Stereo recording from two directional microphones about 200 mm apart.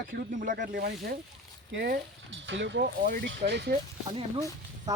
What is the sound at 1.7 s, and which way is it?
Speech, 60° right (ahead or behind).